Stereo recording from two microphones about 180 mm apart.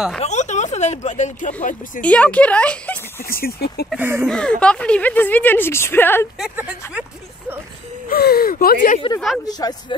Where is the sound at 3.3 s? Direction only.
55° left (ahead or behind).